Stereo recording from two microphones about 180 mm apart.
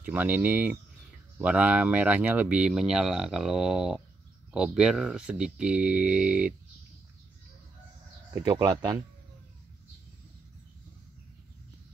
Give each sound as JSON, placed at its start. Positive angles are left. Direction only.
{"t": 0.0, "sound": "speech", "side_deg": -10}
{"t": 8.5, "sound": "speech", "side_deg": -20}